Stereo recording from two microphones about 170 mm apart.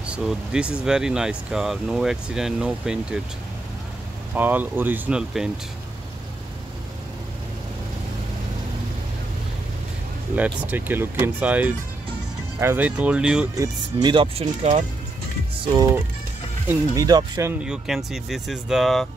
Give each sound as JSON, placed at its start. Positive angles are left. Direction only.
{"t": 0.0, "sound": "speech", "side_deg": -5}
{"t": 4.4, "sound": "speech", "side_deg": -10}
{"t": 10.3, "sound": "speech", "side_deg": -10}
{"t": 13.6, "sound": "speech", "side_deg": -25}
{"t": 15.6, "sound": "speech", "side_deg": -25}